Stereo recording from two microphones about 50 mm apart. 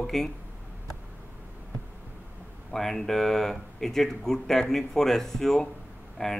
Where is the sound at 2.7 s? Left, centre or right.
Centre.